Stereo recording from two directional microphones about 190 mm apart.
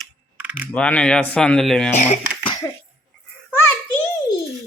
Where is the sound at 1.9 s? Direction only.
35° left (ahead or behind).